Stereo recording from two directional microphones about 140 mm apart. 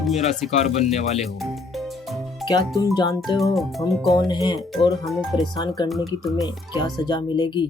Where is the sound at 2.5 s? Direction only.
25° left (ahead or behind).